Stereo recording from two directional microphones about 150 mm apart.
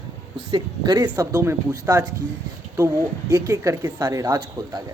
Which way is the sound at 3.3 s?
25° right (ahead or behind).